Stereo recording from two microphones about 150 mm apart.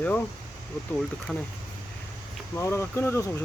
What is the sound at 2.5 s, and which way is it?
Speech, 20° left (ahead or behind).